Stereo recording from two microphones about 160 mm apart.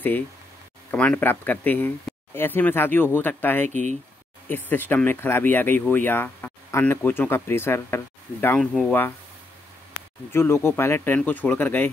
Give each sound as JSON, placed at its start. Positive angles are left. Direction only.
{"t": 0.9, "sound": "speech", "side_deg": 10}
{"t": 3.6, "sound": "speech", "side_deg": -50}
{"t": 4.5, "sound": "speech", "side_deg": 10}
{"t": 10.3, "sound": "speech", "side_deg": 15}